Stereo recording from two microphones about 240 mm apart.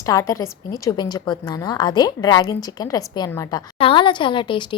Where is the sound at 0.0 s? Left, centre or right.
Centre.